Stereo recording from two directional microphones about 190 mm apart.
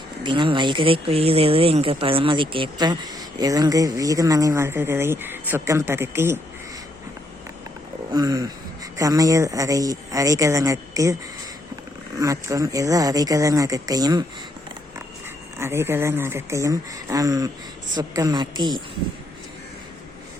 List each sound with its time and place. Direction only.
0.2 s speech: 25° right (ahead or behind)
8.1 s speech: 20° right (ahead or behind)
12.2 s speech: 15° right (ahead or behind)
15.5 s speech: 15° right (ahead or behind)